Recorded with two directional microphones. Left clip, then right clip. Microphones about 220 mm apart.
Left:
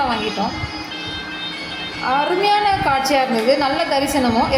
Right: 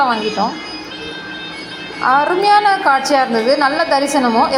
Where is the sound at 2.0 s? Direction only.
10° right (ahead or behind).